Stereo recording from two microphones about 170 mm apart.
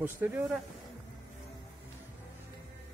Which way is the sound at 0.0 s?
10° right (ahead or behind).